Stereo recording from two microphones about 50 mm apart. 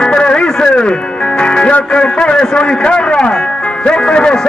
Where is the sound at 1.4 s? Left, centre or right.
Centre.